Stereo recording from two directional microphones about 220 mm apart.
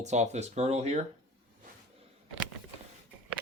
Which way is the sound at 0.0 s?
30° right (ahead or behind).